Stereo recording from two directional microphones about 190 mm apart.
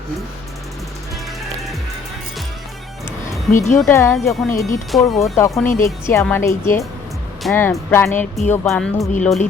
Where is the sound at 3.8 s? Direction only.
15° left (ahead or behind).